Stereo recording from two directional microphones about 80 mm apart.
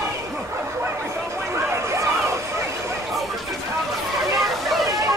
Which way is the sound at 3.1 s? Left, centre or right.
Centre.